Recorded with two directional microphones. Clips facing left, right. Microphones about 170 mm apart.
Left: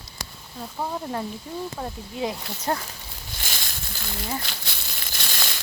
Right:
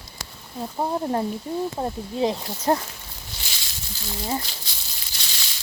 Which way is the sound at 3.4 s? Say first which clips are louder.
Left 4 dB; 50° left (ahead or behind).